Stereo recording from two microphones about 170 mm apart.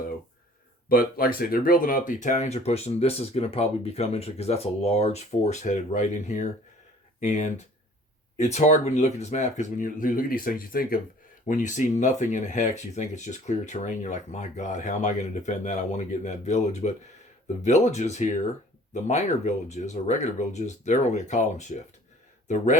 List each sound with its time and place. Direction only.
0.9 s speech: 60° left (ahead or behind); by 18.3 s 45° left (ahead or behind)
19.6 s speech: 40° left (ahead or behind)